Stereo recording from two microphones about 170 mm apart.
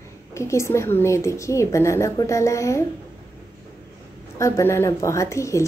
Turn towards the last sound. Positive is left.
turn(degrees=15)  # may be behind; listen again after turning